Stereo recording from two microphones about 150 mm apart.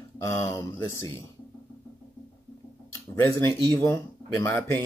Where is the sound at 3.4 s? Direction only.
10° left (ahead or behind).